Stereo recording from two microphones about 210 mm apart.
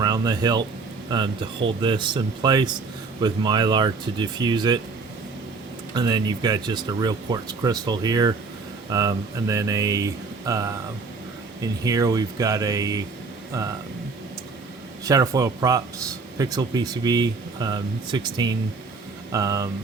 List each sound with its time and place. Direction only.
0.0 s speech: 20° right (ahead or behind)
5.9 s speech: 20° right (ahead or behind)
15.0 s speech: 15° right (ahead or behind)